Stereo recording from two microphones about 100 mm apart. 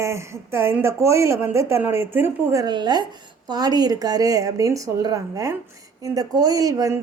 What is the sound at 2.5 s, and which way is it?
A woman's voice, 45° right (ahead or behind).